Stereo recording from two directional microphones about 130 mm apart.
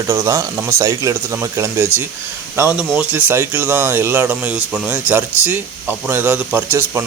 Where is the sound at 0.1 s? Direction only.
20° right (ahead or behind).